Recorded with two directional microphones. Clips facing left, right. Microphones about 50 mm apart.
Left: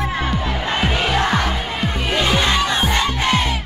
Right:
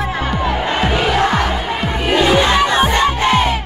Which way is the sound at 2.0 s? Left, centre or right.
Right.